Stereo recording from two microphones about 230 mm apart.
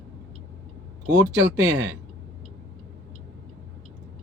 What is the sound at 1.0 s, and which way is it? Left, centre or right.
Speech, right.